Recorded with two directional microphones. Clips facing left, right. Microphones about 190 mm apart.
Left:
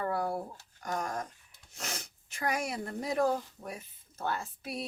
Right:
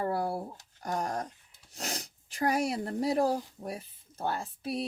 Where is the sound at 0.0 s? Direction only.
30° right (ahead or behind).